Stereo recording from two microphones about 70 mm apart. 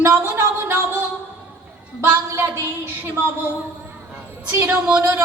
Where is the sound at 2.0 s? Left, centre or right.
Right.